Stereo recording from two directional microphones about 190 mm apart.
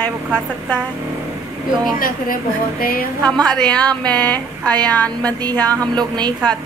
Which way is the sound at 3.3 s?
5° left (ahead or behind).